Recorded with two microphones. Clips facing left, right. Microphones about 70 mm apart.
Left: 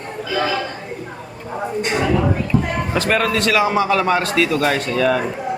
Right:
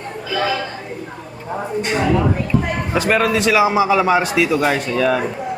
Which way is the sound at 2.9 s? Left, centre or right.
Centre.